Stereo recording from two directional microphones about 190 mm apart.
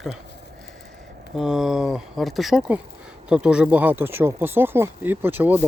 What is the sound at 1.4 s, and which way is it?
Speech, centre (ahead or behind).